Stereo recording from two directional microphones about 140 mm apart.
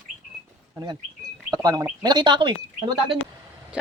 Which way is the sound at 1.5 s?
25° right (ahead or behind).